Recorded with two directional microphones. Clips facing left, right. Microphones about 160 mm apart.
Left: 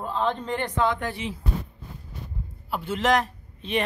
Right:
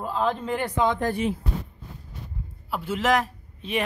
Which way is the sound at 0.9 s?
45° right (ahead or behind).